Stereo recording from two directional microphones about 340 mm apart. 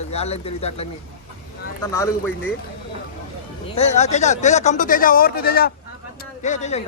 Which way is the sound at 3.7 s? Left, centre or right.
Centre.